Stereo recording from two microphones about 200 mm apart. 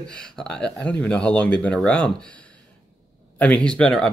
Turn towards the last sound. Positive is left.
turn(degrees=5)  # may be behind; listen again after turning